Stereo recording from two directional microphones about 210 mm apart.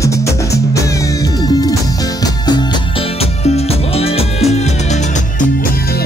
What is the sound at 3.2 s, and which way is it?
Music, 30° left (ahead or behind).